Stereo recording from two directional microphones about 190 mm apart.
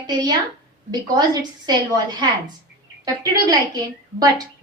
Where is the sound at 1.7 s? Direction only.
20° right (ahead or behind).